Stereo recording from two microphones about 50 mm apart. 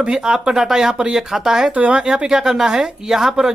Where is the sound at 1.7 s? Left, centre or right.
Right.